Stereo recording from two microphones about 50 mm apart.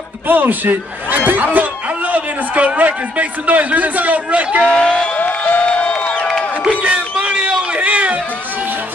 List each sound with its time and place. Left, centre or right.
0.3 s a man's voice: right
4.6 s speech: centre
5.2 s music: left
5.7 s music: left
6.9 s a sound: right